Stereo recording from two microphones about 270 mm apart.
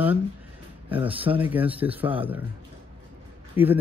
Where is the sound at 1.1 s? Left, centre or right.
Centre.